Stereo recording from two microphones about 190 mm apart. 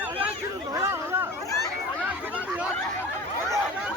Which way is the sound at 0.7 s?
15° right (ahead or behind).